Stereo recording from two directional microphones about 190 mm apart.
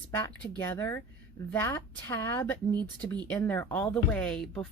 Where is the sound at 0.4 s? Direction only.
10° left (ahead or behind).